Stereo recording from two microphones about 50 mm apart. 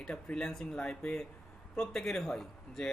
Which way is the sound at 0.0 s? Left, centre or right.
Centre.